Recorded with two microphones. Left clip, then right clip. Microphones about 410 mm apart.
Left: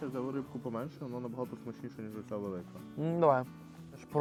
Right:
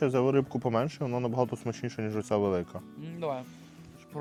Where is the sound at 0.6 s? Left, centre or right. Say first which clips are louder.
Right 11 dB; right.